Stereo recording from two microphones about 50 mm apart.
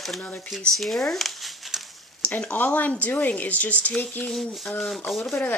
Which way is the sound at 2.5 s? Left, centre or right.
Left.